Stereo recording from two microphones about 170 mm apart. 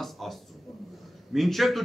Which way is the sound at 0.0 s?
Centre (ahead or behind).